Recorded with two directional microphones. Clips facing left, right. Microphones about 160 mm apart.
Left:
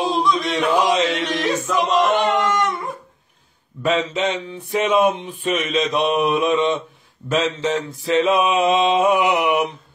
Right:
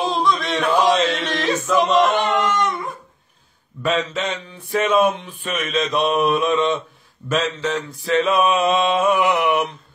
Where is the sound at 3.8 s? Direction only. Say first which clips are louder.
Left 2 dB; 20° left (ahead or behind).